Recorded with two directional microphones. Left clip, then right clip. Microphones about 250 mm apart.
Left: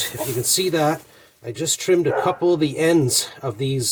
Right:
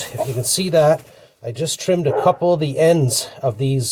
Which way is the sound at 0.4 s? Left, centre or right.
Centre.